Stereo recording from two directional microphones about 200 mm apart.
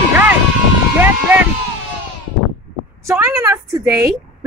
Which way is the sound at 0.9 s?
10° right (ahead or behind).